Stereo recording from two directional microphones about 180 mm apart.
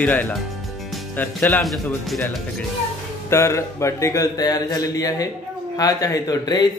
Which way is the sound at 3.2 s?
15° left (ahead or behind).